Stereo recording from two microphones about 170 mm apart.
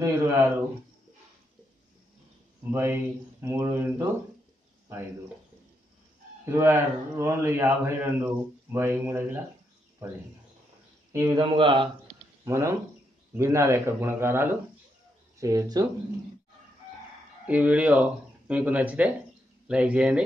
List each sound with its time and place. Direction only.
0.0 s a man's voice: 15° right (ahead or behind)
2.7 s a man's voice: 15° right (ahead or behind)
6.5 s a man's voice: 15° right (ahead or behind)
11.3 s speech: 30° right (ahead or behind)
12.4 s a man's voice: 15° right (ahead or behind)
17.5 s a man's voice: 10° right (ahead or behind)